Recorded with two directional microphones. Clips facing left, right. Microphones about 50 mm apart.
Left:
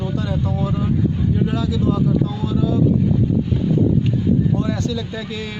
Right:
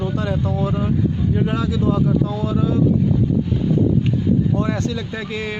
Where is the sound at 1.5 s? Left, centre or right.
Right.